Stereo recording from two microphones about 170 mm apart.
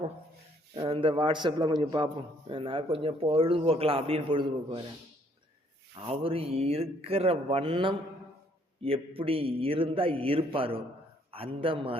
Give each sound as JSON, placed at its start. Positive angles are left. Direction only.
{"t": 0.9, "sound": "a man's voice", "side_deg": -30}
{"t": 6.0, "sound": "speech", "side_deg": -35}